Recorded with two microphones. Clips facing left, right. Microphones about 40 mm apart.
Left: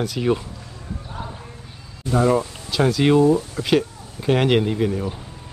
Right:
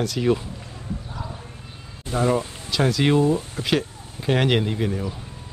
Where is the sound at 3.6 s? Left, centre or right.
Right.